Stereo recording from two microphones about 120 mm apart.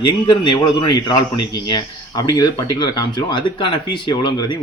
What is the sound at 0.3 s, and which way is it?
Speech, 40° left (ahead or behind).